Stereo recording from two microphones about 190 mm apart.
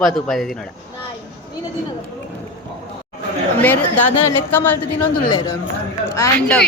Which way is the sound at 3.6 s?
10° left (ahead or behind).